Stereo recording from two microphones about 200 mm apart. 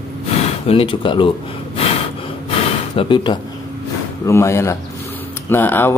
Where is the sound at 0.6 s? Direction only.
25° left (ahead or behind).